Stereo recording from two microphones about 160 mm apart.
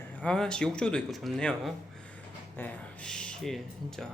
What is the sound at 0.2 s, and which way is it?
Speech, 5° left (ahead or behind).